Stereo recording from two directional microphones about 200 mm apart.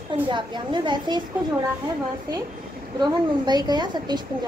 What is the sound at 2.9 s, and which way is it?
A woman's voice, 20° right (ahead or behind).